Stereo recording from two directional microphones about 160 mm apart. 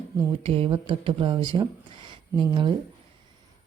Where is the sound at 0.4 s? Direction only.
35° right (ahead or behind).